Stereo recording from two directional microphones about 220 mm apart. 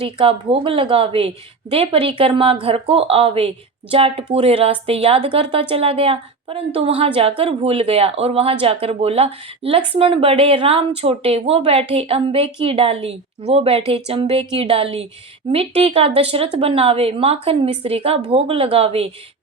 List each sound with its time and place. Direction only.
0.2 s a woman's voice: 25° right (ahead or behind)